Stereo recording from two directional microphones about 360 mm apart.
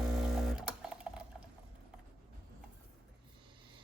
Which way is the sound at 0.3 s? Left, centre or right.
Centre.